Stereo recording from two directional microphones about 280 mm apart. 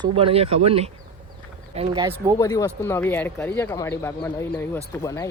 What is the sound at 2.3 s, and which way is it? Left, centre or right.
Speech, centre.